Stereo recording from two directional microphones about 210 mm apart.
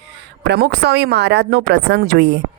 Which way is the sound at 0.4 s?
50° right (ahead or behind).